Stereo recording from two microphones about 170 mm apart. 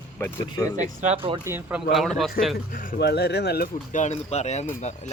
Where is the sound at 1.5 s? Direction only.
10° right (ahead or behind).